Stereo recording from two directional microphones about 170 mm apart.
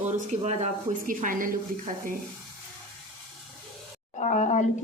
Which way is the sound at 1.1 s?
50° right (ahead or behind).